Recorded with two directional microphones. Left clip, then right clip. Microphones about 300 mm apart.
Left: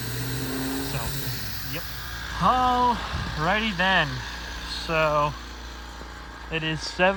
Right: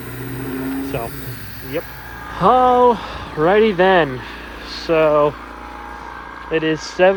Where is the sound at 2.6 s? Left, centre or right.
Right.